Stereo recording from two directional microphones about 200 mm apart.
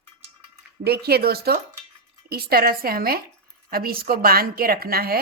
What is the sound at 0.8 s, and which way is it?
A woman's voice, 50° right (ahead or behind).